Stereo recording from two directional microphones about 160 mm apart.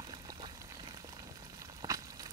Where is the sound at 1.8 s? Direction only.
25° right (ahead or behind).